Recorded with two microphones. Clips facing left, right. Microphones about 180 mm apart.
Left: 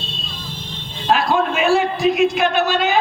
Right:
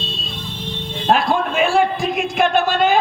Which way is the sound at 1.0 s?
50° right (ahead or behind).